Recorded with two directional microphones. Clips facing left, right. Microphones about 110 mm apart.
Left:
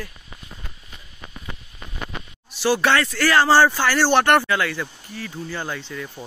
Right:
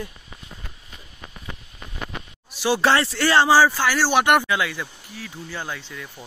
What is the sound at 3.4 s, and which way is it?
Speech, 5° right (ahead or behind).